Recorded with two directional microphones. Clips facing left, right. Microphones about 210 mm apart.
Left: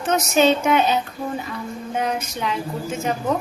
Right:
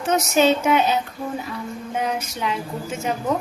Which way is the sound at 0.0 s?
10° right (ahead or behind).